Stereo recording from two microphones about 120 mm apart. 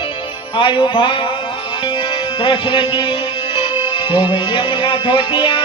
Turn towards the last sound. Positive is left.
turn(degrees=45)  # may be behind; listen again after turning